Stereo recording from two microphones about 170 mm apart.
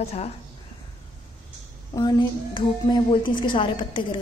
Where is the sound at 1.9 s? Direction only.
25° left (ahead or behind).